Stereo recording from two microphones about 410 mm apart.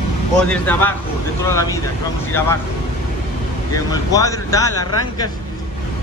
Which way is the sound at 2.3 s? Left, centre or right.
Centre.